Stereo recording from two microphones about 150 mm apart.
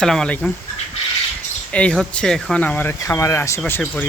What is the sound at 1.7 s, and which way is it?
Speech, 10° left (ahead or behind).